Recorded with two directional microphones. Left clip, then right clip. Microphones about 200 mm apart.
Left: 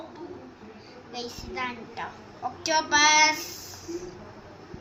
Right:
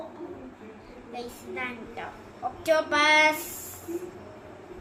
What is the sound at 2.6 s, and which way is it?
Speech, 20° right (ahead or behind).